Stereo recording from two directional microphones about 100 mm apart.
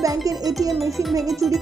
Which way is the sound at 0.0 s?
35° right (ahead or behind).